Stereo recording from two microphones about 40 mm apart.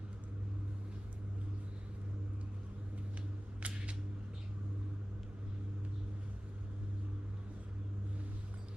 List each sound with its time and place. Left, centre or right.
3.6 s camera: right